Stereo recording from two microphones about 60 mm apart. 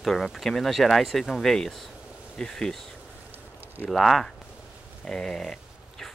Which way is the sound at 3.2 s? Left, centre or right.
Right.